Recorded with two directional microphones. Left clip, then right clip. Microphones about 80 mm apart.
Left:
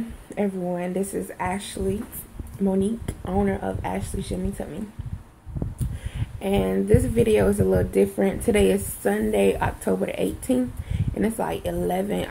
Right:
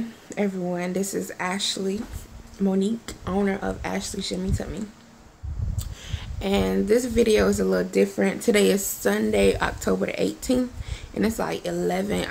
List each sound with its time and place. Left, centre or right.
0.3 s a sound: centre
0.7 s speech: centre
6.4 s speech: right
7.5 s speech: centre
8.5 s speech: right